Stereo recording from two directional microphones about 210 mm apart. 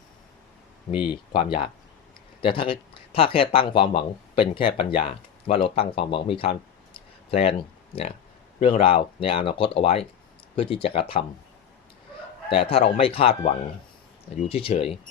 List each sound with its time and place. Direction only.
1.1 s speech: 25° left (ahead or behind)
8.5 s speech: 25° left (ahead or behind)
12.5 s speech: 25° left (ahead or behind)